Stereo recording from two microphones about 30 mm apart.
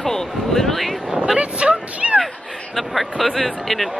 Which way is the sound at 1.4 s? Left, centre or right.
Right.